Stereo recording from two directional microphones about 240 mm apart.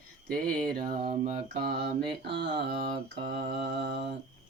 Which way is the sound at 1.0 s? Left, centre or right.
Right.